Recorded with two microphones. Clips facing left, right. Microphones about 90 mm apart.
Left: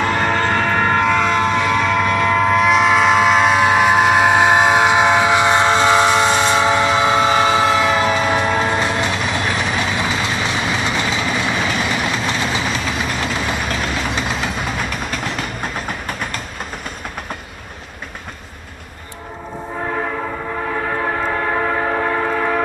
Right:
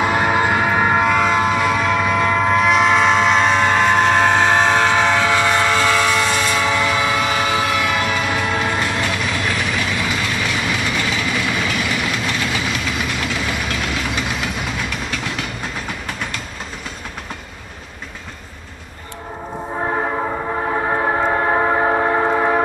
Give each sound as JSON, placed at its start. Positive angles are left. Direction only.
{"t": 0.0, "sound": "train", "side_deg": -10}
{"t": 21.0, "sound": "train", "side_deg": -25}